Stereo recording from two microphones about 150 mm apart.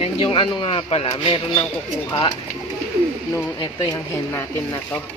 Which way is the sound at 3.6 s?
25° left (ahead or behind).